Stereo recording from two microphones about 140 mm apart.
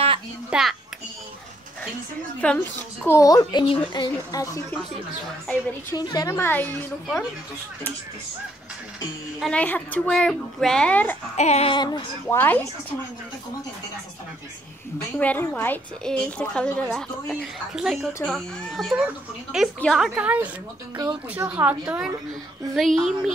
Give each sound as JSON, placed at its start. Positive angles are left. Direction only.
{"t": 0.5, "sound": "speech", "side_deg": -5}
{"t": 2.4, "sound": "a woman's voice", "side_deg": 10}
{"t": 3.2, "sound": "speech", "side_deg": 25}
{"t": 3.6, "sound": "a woman's voice", "side_deg": 35}
{"t": 5.9, "sound": "a woman's voice", "side_deg": 30}
{"t": 9.4, "sound": "a woman's voice", "side_deg": 10}
{"t": 11.3, "sound": "a sound", "side_deg": 50}
{"t": 11.7, "sound": "speech", "side_deg": 35}
{"t": 12.3, "sound": "a woman's voice", "side_deg": 15}
{"t": 15.1, "sound": "a woman's voice", "side_deg": 10}
{"t": 16.8, "sound": "speech", "side_deg": 0}
{"t": 20.2, "sound": "a woman's voice", "side_deg": -10}
{"t": 22.8, "sound": "speech", "side_deg": 0}